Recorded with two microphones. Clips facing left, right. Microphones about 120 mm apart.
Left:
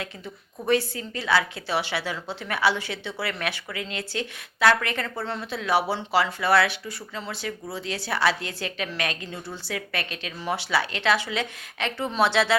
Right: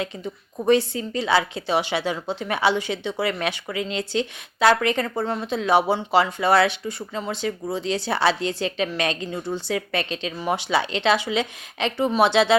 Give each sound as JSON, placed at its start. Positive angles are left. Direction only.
{"t": 0.6, "sound": "a woman's voice", "side_deg": -25}